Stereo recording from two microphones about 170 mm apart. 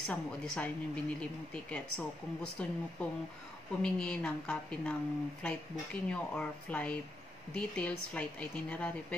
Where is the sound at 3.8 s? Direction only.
5° left (ahead or behind).